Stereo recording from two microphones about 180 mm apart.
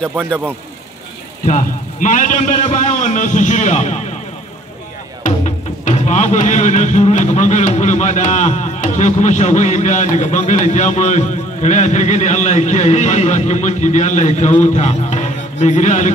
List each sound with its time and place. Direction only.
1.4 s music: 45° left (ahead or behind)
5.2 s music: 40° left (ahead or behind)